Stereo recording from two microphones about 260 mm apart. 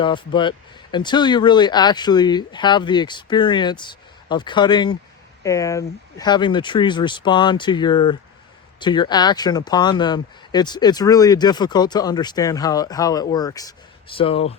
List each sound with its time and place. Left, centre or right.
0.0 s speech: centre